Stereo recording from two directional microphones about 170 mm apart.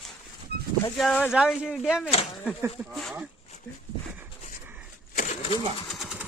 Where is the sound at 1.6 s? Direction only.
5° right (ahead or behind).